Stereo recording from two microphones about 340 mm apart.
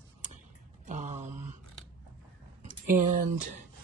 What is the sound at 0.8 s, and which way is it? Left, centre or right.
Mantra, right.